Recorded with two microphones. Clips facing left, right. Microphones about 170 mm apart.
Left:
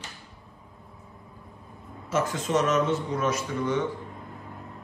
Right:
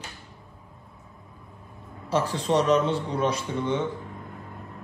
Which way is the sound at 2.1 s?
35° right (ahead or behind).